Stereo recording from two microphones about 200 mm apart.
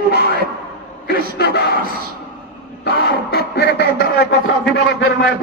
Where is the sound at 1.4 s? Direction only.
55° left (ahead or behind).